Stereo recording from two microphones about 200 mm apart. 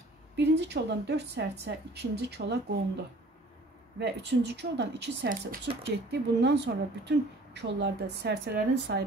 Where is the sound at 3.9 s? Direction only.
55° right (ahead or behind).